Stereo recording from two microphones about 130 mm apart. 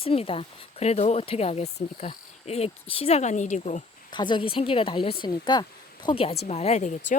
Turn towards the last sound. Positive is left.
turn(degrees=60)  # may be behind; listen again after turning